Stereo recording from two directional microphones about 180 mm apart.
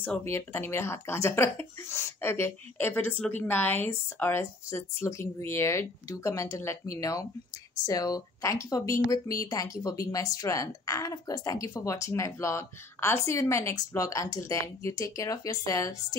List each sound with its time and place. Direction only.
0.0 s speech: 10° left (ahead or behind)